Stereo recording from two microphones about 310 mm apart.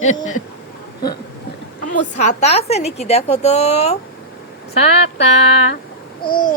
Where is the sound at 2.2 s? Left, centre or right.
Left.